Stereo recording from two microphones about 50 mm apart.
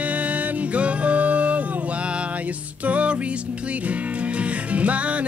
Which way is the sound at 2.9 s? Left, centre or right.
Right.